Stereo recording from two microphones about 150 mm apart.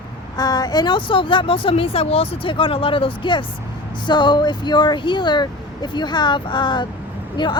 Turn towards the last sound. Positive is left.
turn(degrees=30)  # may be behind; listen again after turning